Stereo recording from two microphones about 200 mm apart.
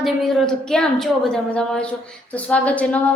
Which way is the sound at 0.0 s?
Centre (ahead or behind).